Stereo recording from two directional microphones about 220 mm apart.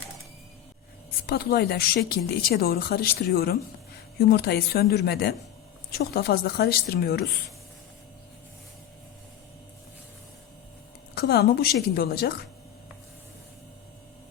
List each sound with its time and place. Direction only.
1.3 s speech: 45° left (ahead or behind)
11.1 s speech: 45° left (ahead or behind)